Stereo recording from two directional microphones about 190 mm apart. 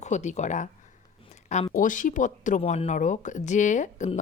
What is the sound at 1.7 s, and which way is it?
Speech, 45° left (ahead or behind).